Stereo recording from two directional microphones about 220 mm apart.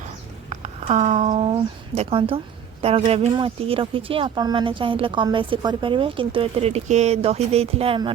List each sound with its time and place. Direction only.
0.5 s speech: 30° right (ahead or behind)